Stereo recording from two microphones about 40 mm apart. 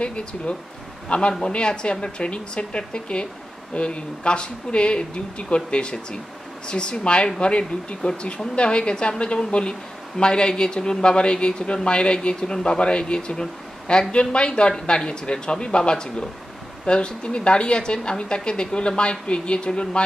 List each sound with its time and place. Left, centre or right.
0.0 s speech: left